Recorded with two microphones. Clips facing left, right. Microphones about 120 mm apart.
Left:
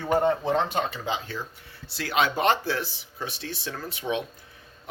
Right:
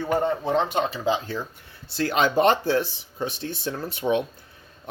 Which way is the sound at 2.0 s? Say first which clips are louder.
Right 4 dB; 40° right (ahead or behind).